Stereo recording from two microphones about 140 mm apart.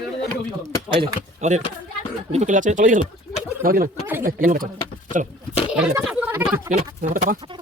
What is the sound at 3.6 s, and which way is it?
Speech, 90° right.